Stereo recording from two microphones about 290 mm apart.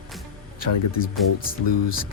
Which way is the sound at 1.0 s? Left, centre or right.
Left.